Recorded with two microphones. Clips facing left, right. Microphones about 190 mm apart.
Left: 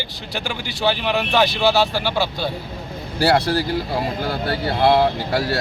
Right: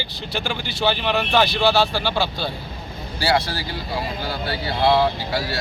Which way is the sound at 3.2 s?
50° left (ahead or behind).